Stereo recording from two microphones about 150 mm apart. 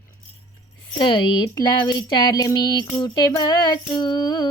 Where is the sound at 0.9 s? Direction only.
30° left (ahead or behind).